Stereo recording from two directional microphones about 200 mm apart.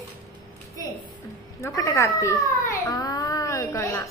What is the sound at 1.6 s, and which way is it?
Cat, 15° left (ahead or behind).